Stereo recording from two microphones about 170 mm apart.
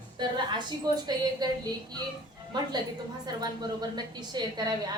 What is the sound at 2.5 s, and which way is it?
A woman's voice, 25° right (ahead or behind).